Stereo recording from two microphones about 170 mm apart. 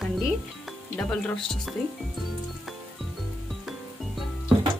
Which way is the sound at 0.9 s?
5° left (ahead or behind).